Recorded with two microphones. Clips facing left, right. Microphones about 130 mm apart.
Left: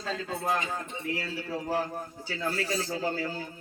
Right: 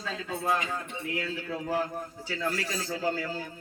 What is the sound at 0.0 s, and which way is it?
Speech, 45° left (ahead or behind).